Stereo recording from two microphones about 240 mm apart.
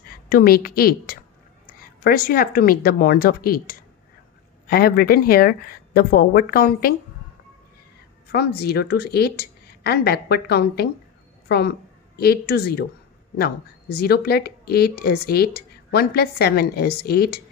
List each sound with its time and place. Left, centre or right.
0.1 s a woman's voice: left
8.3 s a woman's voice: left